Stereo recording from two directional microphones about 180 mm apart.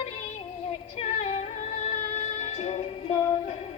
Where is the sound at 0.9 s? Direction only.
35° left (ahead or behind).